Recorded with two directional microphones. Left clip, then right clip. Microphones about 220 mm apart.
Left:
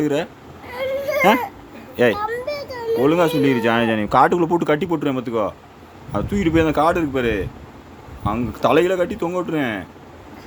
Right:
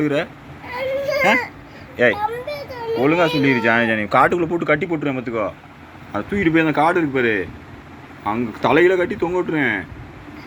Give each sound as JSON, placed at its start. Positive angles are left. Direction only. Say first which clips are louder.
{"t": 0.0, "sound": "speech", "louder": "right 1 dB", "side_deg": 20}
{"t": 0.7, "sound": "a sound", "louder": "right 1 dB", "side_deg": 15}
{"t": 2.1, "sound": "a child's voice", "louder": "even", "side_deg": 10}